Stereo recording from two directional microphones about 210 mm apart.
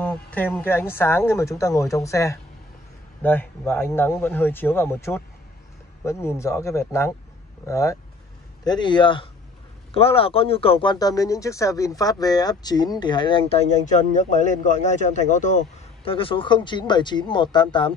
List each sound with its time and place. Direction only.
0.0 s speech: 5° left (ahead or behind); by 13.6 s 25° left (ahead or behind)
13.8 s speech: 35° left (ahead or behind)